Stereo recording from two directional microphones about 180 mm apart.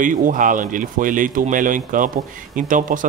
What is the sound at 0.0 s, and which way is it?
Speech, 45° right (ahead or behind).